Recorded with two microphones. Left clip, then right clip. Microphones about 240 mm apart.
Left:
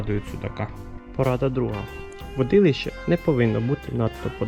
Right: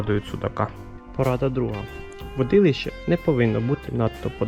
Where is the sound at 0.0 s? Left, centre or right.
Centre.